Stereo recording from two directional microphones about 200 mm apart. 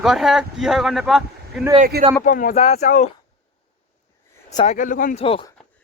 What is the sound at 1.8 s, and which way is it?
Speech, 40° right (ahead or behind).